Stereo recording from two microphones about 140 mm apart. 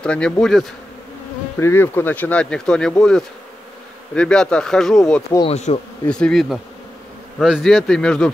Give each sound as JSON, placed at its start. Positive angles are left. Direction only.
{"t": 0.0, "sound": "speech", "side_deg": 5}
{"t": 1.6, "sound": "speech", "side_deg": 15}
{"t": 5.5, "sound": "bee", "side_deg": 50}
{"t": 6.0, "sound": "speech", "side_deg": 5}